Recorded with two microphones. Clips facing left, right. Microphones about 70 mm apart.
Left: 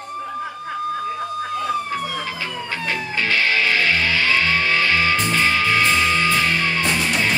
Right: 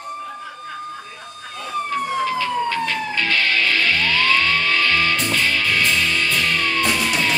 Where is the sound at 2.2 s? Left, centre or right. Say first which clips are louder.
Right 7 dB; left.